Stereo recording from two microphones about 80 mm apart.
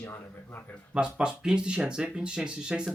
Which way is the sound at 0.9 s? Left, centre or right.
Centre.